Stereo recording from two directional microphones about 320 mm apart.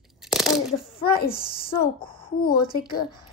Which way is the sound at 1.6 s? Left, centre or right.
Left.